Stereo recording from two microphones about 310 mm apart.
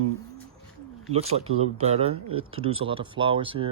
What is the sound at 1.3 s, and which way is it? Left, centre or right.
Speech, right.